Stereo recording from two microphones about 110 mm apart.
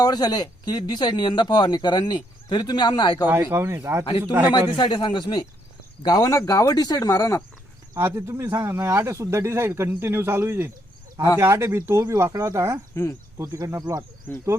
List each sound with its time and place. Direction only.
0.0 s speech: 35° left (ahead or behind)
3.2 s speech: 20° right (ahead or behind)
4.8 s speech: 40° left (ahead or behind)
7.9 s speech: 25° right (ahead or behind)
12.9 s speech: 30° left (ahead or behind)
13.4 s speech: 30° right (ahead or behind)